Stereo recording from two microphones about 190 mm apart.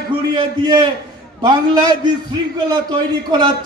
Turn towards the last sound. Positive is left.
turn(degrees=-20)  # may be behind; listen again after turning